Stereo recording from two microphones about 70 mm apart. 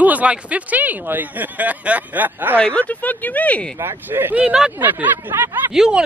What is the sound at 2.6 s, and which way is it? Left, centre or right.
Speech, centre.